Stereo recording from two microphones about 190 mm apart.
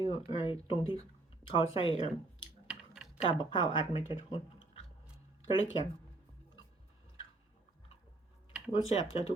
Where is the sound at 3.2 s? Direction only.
25° left (ahead or behind).